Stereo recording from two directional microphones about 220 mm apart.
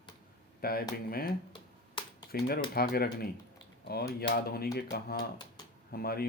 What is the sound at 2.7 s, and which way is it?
Speech, 45° left (ahead or behind).